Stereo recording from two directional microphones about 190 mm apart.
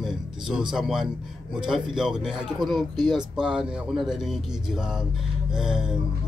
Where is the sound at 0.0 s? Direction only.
Centre (ahead or behind).